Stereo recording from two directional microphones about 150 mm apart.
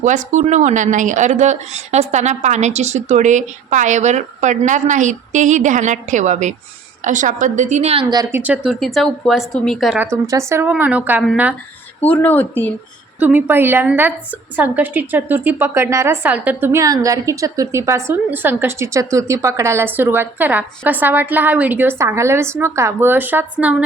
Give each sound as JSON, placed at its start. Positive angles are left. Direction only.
{"t": 0.0, "sound": "a woman's voice", "side_deg": -55}
{"t": 8.1, "sound": "speech", "side_deg": -25}
{"t": 8.4, "sound": "speech", "side_deg": -10}
{"t": 10.0, "sound": "a woman's voice", "side_deg": -20}
{"t": 12.0, "sound": "a woman's voice", "side_deg": 10}
{"t": 13.1, "sound": "a woman's voice", "side_deg": -10}